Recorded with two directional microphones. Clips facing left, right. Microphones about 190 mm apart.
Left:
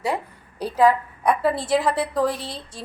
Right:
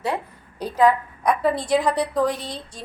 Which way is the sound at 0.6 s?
10° left (ahead or behind).